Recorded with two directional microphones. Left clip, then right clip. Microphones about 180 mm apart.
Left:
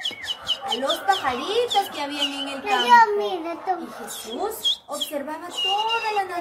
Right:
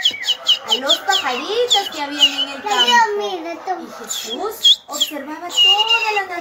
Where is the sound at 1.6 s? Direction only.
15° left (ahead or behind).